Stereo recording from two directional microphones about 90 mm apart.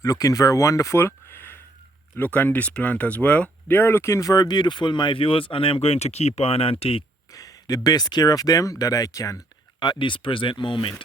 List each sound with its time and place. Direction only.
0.0 s speech: 40° left (ahead or behind); by 7.0 s 90° left
7.3 s speech: 40° left (ahead or behind)
9.8 s speech: 60° left (ahead or behind)